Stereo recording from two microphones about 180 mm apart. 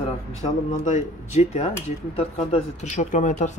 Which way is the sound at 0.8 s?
40° left (ahead or behind).